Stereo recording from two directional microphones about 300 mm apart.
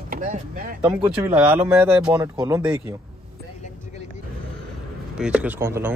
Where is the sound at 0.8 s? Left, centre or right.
Centre.